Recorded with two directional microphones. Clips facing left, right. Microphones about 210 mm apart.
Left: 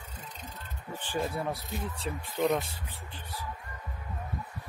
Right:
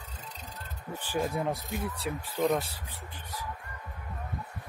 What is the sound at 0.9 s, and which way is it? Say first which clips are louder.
Speech: right 2 dB; 10° right (ahead or behind).